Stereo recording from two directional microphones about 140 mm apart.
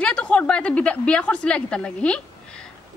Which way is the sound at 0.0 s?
10° left (ahead or behind).